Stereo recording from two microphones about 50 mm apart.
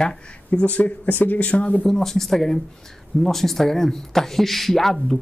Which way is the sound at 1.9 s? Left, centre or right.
Centre.